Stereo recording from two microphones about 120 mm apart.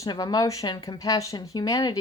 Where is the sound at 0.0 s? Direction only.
35° left (ahead or behind).